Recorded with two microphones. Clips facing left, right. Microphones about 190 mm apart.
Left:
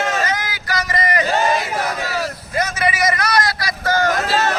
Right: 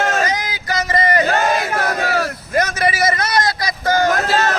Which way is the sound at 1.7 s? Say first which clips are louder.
Right 3 dB; 60° right (ahead or behind).